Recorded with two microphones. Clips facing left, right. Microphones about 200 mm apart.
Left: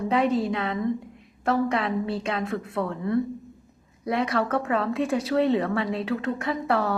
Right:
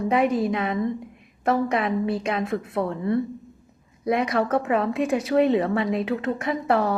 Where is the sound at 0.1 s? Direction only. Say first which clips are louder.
Right 1 dB; 10° right (ahead or behind).